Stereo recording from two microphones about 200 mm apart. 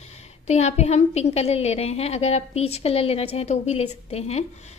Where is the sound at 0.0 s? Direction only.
35° left (ahead or behind).